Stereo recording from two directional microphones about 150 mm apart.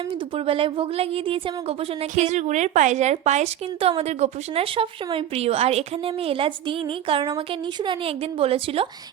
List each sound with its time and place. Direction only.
0.3 s a woman's voice: 40° right (ahead or behind)